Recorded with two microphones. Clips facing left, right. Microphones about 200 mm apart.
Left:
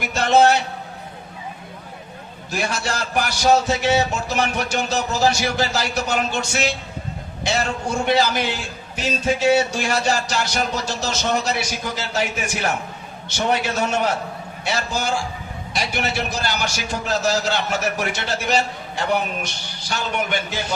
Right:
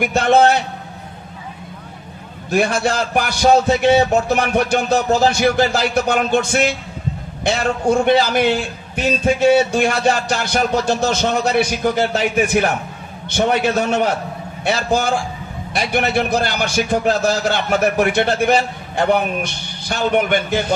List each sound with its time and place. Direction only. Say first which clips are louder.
0.0 s a man's voice: right 3 dB; 55° right (ahead or behind)
2.5 s a man's voice: right 8 dB; 55° right (ahead or behind)